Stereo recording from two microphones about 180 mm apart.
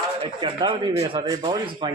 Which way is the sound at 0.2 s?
30° right (ahead or behind).